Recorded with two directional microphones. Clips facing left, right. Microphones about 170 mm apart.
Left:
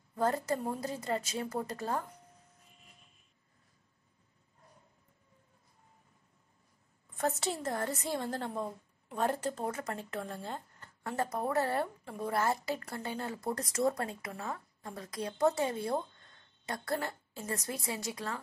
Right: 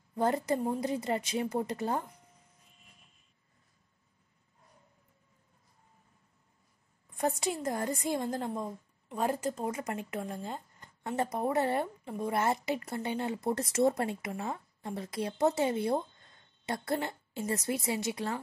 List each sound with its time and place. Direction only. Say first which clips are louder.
0.1 s speech: right 2 dB; 20° right (ahead or behind)
7.6 s a woman's voice: right 3 dB; 15° right (ahead or behind)